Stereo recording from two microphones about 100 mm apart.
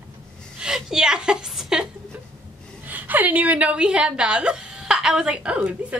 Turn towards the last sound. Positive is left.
turn(degrees=-10)  # may be behind; listen again after turning